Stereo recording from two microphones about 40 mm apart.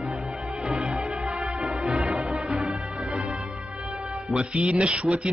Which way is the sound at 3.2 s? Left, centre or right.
Right.